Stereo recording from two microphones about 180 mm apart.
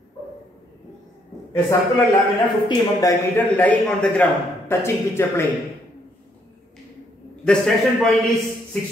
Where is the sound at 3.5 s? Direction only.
10° left (ahead or behind).